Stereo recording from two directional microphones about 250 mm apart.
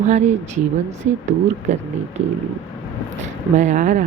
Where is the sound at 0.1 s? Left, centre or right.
Right.